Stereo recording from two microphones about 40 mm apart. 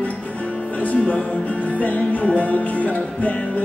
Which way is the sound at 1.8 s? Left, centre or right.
Left.